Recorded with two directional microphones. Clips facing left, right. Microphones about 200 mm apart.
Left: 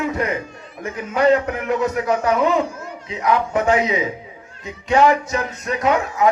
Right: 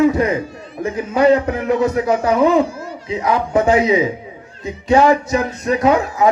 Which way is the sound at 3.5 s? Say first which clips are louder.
Right 6 dB; 35° right (ahead or behind).